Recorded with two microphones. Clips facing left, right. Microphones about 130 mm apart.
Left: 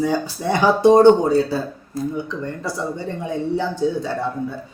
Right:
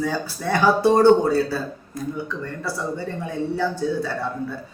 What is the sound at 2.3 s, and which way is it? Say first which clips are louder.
Speech: left 2 dB; 20° left (ahead or behind).